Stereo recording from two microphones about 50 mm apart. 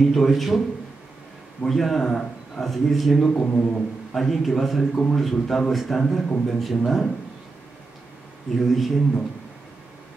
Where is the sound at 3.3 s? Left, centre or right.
Left.